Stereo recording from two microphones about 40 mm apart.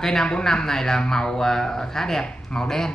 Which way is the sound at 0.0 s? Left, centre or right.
Centre.